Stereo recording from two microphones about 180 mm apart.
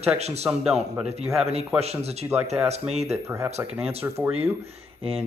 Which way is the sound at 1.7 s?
35° right (ahead or behind).